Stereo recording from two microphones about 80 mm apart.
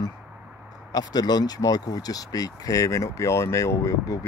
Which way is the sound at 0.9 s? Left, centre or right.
Left.